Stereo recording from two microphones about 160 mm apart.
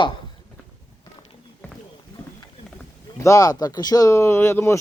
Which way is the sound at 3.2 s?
20° left (ahead or behind).